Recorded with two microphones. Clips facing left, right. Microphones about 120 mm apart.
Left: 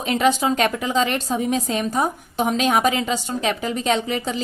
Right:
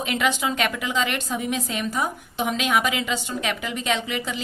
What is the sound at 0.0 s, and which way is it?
A woman's voice, 35° left (ahead or behind).